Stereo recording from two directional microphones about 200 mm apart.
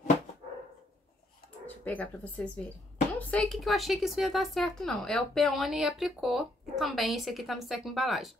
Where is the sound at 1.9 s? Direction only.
5° left (ahead or behind).